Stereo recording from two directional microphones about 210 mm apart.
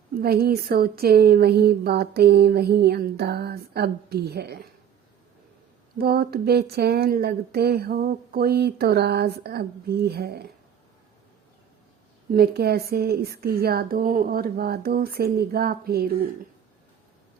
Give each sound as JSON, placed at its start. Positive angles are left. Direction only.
{"t": 0.2, "sound": "speech", "side_deg": -45}
{"t": 6.0, "sound": "speech", "side_deg": -45}
{"t": 12.3, "sound": "speech", "side_deg": -50}